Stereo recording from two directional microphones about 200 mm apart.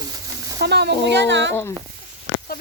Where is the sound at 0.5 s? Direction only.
55° right (ahead or behind).